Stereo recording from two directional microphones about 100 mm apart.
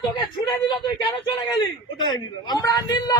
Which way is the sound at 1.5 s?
50° left (ahead or behind).